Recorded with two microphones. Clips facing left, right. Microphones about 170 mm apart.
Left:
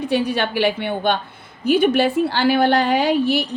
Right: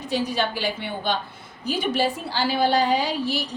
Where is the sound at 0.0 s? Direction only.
60° left (ahead or behind).